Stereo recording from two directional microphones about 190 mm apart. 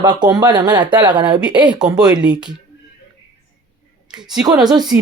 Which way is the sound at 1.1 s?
5° right (ahead or behind).